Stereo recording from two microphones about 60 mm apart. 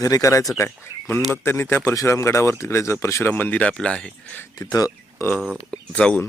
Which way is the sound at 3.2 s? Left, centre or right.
Left.